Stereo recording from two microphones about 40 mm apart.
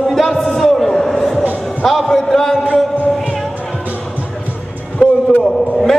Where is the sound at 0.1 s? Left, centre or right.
Centre.